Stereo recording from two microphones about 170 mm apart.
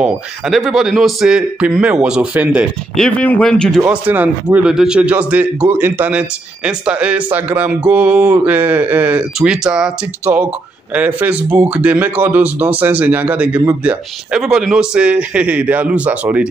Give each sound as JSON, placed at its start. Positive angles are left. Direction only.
{"t": 0.0, "sound": "a man's voice", "side_deg": 0}
{"t": 3.0, "sound": "a man's voice", "side_deg": 10}
{"t": 3.8, "sound": "speech", "side_deg": -10}